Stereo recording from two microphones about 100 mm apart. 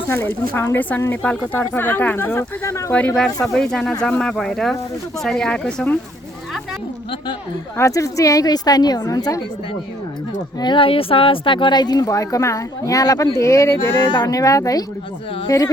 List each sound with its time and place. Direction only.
0.1 s speech: 20° left (ahead or behind)
3.4 s speech: 5° left (ahead or behind)
7.8 s a woman's voice: 30° left (ahead or behind)
10.6 s speech: 55° left (ahead or behind); by 13.9 s 30° left (ahead or behind)
14.0 s speech: 55° left (ahead or behind)
14.3 s a woman's voice: 35° left (ahead or behind)